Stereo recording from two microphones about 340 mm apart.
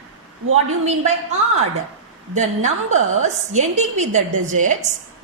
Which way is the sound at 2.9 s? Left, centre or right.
Right.